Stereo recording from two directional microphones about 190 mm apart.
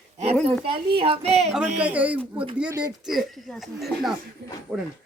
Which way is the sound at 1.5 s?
5° right (ahead or behind).